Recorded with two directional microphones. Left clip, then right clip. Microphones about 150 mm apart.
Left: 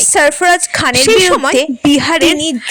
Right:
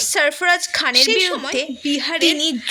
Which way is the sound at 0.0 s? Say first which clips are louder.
Left 7 dB; 45° left (ahead or behind).